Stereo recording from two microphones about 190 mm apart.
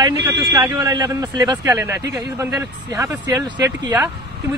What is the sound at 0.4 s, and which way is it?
Speech, 15° right (ahead or behind).